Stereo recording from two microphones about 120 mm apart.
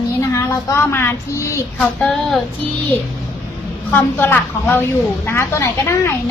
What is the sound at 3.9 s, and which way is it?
A woman's voice, 15° left (ahead or behind).